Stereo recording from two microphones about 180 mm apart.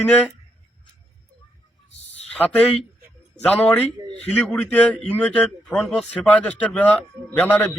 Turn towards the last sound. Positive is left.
turn(degrees=10)  # may be behind; listen again after turning